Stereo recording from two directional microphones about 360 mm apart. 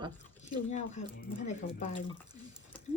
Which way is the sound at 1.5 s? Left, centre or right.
Centre.